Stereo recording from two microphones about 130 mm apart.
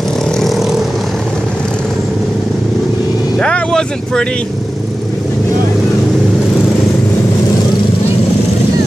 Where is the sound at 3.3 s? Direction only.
5° left (ahead or behind).